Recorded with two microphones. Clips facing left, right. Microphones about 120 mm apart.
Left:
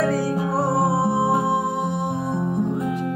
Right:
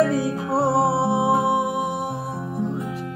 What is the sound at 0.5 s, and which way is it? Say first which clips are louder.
Music: right 3 dB; 25° right (ahead or behind).